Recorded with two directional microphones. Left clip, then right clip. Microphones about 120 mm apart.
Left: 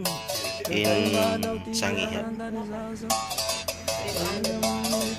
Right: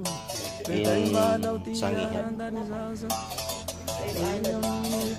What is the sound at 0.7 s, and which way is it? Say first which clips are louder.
Music: left 1 dB; centre (ahead or behind).